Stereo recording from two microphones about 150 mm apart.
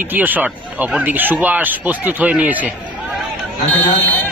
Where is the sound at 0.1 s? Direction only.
10° right (ahead or behind).